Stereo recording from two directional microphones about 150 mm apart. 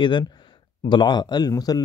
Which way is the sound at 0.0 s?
30° left (ahead or behind).